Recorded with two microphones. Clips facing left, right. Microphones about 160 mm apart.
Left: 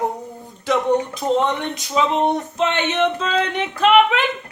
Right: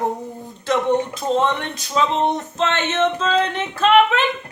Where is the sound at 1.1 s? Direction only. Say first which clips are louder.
Even; 15° left (ahead or behind).